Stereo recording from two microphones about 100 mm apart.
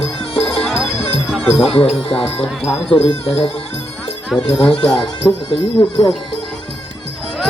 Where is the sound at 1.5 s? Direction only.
75° left (ahead or behind).